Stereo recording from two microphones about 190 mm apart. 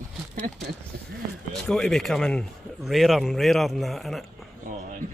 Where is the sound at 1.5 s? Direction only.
5° left (ahead or behind).